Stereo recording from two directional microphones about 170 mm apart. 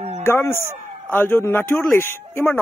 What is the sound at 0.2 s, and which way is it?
Speech, 15° left (ahead or behind).